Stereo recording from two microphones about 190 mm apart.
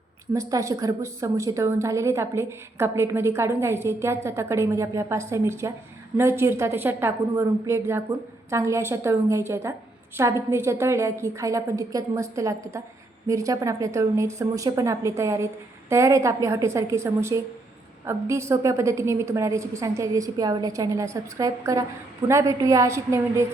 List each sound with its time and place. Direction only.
0.3 s a woman's voice: 15° right (ahead or behind)